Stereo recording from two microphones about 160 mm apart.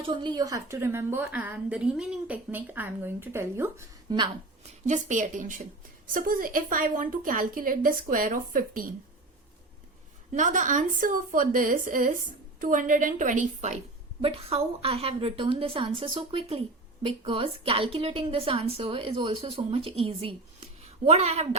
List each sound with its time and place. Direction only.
0.0 s a woman's voice: 30° right (ahead or behind)
4.9 s a woman's voice: 50° right (ahead or behind)
10.3 s a woman's voice: 55° right (ahead or behind)
14.2 s a woman's voice: 35° right (ahead or behind)